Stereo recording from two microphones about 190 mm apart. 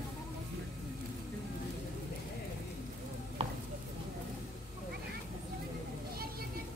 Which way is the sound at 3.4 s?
30° right (ahead or behind).